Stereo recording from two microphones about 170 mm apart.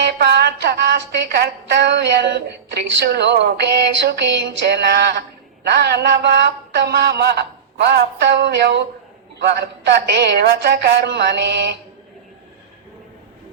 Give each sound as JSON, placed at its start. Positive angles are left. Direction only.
{"t": 0.0, "sound": "a woman's voice", "side_deg": -85}